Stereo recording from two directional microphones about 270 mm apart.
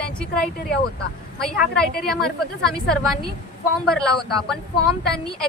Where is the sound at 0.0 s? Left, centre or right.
Centre.